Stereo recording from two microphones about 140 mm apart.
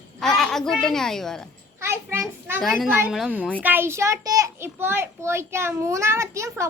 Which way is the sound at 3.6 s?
15° right (ahead or behind).